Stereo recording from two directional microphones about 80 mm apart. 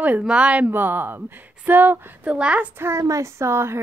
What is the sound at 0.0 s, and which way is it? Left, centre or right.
A woman's voice, centre.